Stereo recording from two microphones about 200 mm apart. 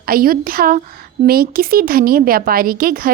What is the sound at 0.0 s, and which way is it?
Speech, 45° right (ahead or behind).